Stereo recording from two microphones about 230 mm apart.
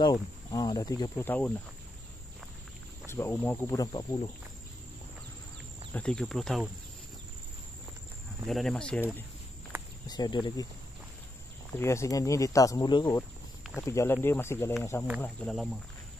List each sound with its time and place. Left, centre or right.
0.0 s speech: centre
3.1 s speech: centre
5.9 s speech: centre
8.5 s speech: centre
10.0 s speech: centre
11.8 s speech: centre